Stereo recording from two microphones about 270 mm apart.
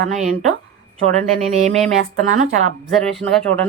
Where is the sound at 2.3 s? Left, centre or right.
Right.